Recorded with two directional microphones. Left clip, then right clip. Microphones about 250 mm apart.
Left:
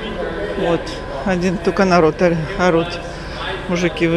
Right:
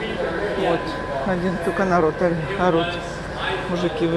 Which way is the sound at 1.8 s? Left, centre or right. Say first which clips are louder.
Left 6 dB; left.